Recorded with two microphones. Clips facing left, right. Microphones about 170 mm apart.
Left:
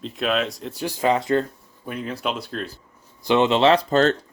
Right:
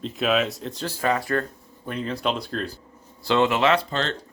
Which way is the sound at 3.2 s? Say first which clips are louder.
Left 3 dB; 20° left (ahead or behind).